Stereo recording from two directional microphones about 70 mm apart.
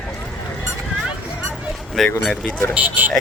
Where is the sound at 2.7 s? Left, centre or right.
Right.